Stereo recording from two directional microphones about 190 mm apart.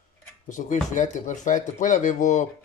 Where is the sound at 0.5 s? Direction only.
40° left (ahead or behind).